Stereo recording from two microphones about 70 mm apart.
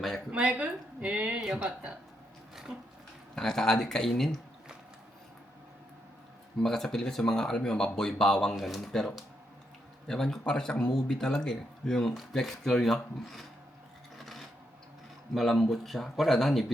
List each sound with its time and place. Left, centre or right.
0.3 s a woman's voice: centre
3.3 s speech: centre
6.6 s speech: centre
14.2 s filing: centre
15.4 s speech: centre